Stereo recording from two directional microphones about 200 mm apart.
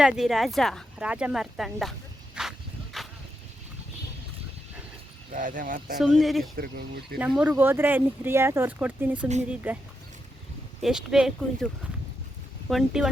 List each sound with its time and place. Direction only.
0.0 s speech: centre (ahead or behind)
2.3 s a sound: centre (ahead or behind)
5.3 s speech: 40° right (ahead or behind)
6.0 s speech: centre (ahead or behind)
6.6 s speech: 50° right (ahead or behind)
7.2 s speech: 5° right (ahead or behind)